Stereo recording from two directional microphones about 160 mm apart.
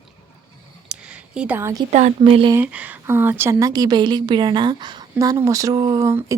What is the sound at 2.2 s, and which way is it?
Speech, 35° right (ahead or behind).